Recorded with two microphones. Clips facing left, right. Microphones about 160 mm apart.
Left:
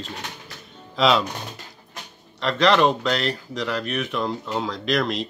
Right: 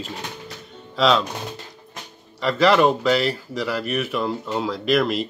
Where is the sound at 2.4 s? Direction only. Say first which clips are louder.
Right 2 dB; 5° right (ahead or behind).